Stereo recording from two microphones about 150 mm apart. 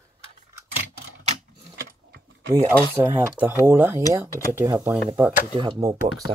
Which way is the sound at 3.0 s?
15° right (ahead or behind).